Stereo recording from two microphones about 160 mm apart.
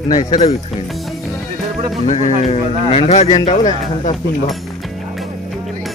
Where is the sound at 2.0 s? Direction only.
50° left (ahead or behind).